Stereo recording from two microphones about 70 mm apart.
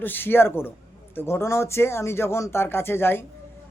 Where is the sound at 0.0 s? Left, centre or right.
Left.